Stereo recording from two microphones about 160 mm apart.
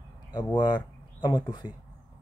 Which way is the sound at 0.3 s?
25° left (ahead or behind).